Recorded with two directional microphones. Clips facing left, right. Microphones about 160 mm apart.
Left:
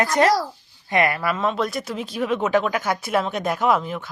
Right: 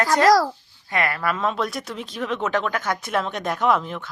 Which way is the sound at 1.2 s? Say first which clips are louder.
Left 1 dB; centre (ahead or behind).